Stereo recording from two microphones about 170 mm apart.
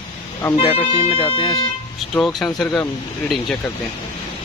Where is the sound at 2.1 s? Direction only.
Centre (ahead or behind).